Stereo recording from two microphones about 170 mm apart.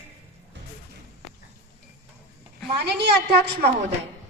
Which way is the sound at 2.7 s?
75° right (ahead or behind).